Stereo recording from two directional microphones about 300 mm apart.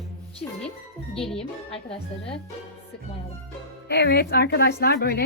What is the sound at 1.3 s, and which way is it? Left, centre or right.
Speech, centre.